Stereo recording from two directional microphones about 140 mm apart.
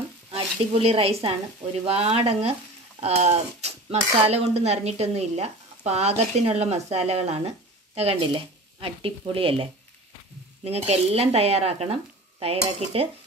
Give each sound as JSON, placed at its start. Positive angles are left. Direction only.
{"t": 0.3, "sound": "speech", "side_deg": -45}